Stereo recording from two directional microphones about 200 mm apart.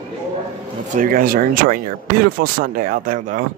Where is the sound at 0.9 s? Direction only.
40° right (ahead or behind).